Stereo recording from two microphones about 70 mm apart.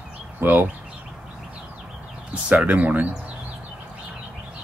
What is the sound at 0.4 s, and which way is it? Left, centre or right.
Speech, right.